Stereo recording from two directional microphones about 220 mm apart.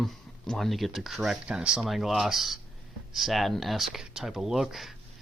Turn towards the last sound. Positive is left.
turn(degrees=0)  # may be behind; listen again after turning